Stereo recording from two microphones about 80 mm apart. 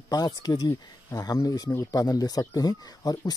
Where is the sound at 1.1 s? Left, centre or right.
Left.